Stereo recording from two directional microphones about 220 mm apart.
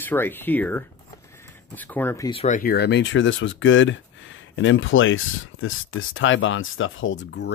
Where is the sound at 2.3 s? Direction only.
35° left (ahead or behind).